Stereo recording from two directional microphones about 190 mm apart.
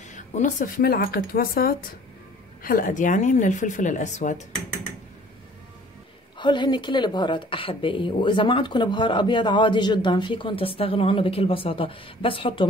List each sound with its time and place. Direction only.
0.1 s speech: 40° left (ahead or behind)
6.3 s a woman's voice: 25° left (ahead or behind)